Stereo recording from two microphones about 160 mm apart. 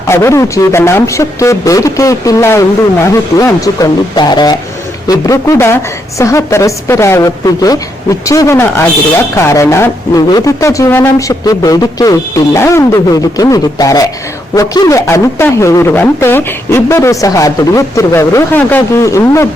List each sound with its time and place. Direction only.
0.1 s speech: 15° left (ahead or behind)